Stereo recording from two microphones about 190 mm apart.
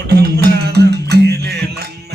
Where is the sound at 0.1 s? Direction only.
60° right (ahead or behind).